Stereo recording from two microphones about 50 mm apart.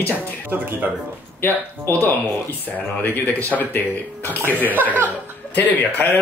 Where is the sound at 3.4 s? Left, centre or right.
Left.